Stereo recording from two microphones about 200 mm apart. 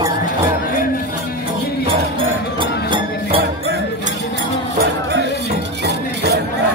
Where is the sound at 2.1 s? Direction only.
25° right (ahead or behind).